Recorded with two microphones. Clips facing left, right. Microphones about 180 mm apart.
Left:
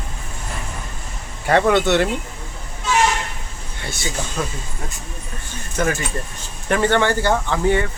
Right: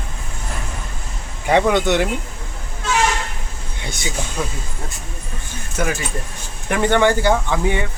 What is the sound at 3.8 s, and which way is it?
Speech, 15° right (ahead or behind).